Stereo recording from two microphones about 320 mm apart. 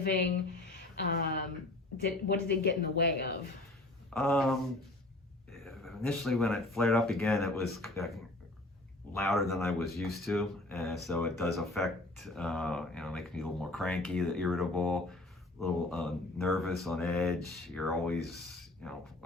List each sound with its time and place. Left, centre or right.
0.9 s speech: left
4.1 s speech: centre